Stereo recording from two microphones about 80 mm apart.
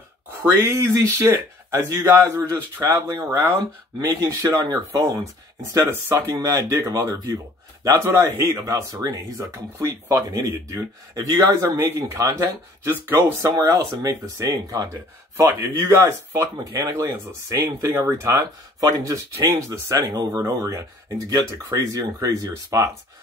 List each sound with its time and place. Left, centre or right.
0.6 s speech: right
6.1 s speech: right
18.8 s speech: right
20.0 s speech: right